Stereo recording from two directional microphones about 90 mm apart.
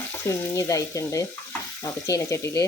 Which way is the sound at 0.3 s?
35° left (ahead or behind).